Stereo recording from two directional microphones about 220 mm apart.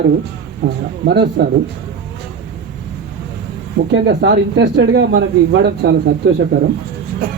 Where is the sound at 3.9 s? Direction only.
50° right (ahead or behind).